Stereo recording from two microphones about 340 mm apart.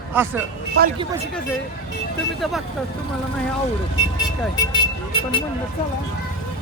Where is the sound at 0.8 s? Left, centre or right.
Right.